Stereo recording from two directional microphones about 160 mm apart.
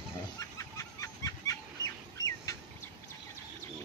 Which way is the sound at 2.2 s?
20° left (ahead or behind).